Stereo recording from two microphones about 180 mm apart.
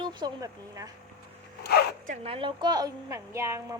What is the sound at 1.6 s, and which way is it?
Zipper, 65° left (ahead or behind).